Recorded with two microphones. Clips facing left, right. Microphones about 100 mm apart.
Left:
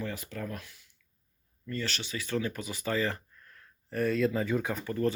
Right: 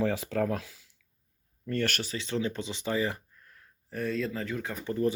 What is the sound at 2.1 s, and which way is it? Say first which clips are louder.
Speech: right 1 dB; 20° right (ahead or behind).